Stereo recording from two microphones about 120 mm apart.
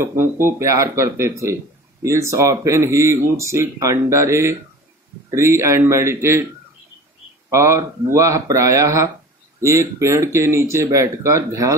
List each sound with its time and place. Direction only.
0.0 s speech: 20° right (ahead or behind)
7.4 s speech: 25° right (ahead or behind)